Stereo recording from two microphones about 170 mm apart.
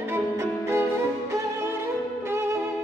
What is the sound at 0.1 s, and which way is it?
Music, 15° right (ahead or behind).